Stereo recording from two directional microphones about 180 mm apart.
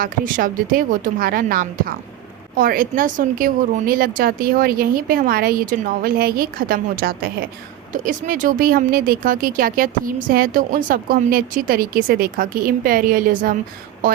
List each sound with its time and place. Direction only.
0.0 s speech: 50° right (ahead or behind)